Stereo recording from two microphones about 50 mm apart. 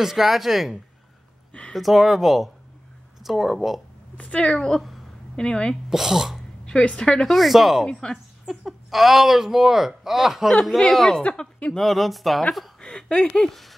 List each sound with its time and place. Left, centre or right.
0.0 s speech: centre
4.2 s speech: left
4.5 s speech: centre
4.7 s speech: centre
5.3 s a woman's voice: centre
5.9 s speech: centre
6.6 s a woman's voice: centre
7.2 s speech: centre
7.8 s speech: centre
8.5 s speech: centre
11.7 s speech: centre
12.8 s a sound: centre
13.4 s speech: centre